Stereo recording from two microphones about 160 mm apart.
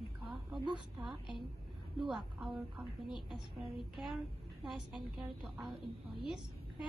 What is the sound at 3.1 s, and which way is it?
A woman's voice, centre (ahead or behind).